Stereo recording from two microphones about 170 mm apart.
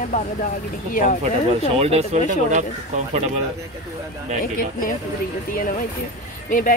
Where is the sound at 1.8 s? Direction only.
35° right (ahead or behind).